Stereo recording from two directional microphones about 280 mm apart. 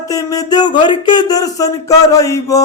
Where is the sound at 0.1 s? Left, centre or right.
Centre.